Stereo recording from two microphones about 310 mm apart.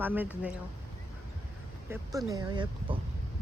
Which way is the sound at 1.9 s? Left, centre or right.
Centre.